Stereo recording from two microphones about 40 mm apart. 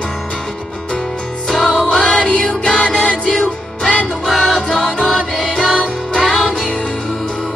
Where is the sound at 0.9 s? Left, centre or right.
Left.